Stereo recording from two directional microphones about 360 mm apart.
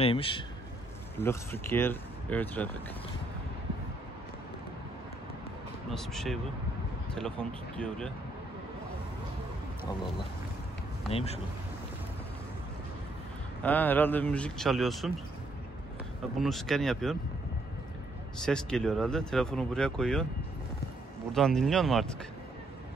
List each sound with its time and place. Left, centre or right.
0.0 s a man's voice: centre
5.9 s speech: centre
11.1 s a man's voice: centre
13.6 s speech: centre
16.3 s speech: centre
18.4 s speech: centre
21.3 s speech: centre